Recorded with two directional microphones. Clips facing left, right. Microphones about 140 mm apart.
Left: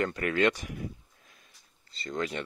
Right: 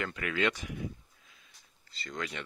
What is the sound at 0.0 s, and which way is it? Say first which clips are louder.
Speech: left 5 dB; 40° left (ahead or behind).